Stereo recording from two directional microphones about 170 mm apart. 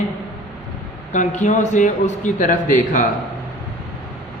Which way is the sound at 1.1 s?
45° left (ahead or behind).